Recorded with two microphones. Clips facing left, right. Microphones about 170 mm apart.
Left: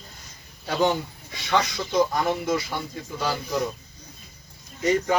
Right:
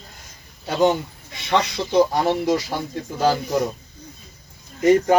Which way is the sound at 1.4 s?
30° right (ahead or behind).